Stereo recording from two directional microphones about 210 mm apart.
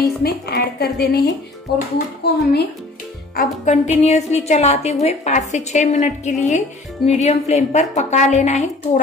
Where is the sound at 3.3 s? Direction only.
35° left (ahead or behind).